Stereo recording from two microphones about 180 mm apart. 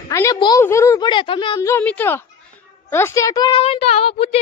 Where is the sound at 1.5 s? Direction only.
15° left (ahead or behind).